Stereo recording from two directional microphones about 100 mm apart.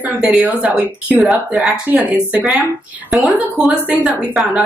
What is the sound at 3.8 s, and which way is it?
Speech, 10° right (ahead or behind).